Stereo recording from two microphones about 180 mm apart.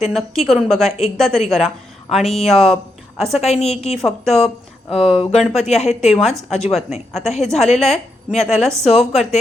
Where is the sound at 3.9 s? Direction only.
Centre (ahead or behind).